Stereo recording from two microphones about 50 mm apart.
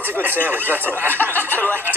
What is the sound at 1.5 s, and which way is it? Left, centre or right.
Speech, left.